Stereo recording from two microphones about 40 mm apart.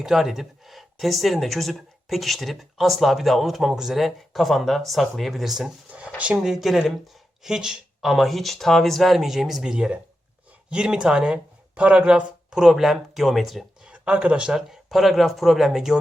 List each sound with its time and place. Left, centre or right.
0.0 s speech: centre
7.4 s speech: centre
8.0 s speech: centre
11.7 s speech: right; by 13.7 s centre
13.8 s a sound: right
14.4 s speech: centre
14.8 s speech: centre